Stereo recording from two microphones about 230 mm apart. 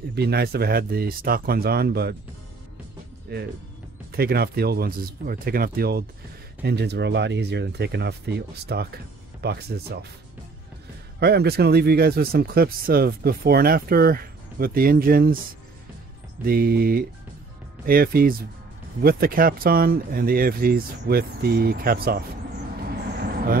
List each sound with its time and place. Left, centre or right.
0.1 s speech: right
3.3 s speech: right
11.1 s speech: right
16.4 s speech: right